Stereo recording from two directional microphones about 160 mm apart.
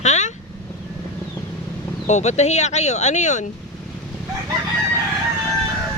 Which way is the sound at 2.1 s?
45° left (ahead or behind).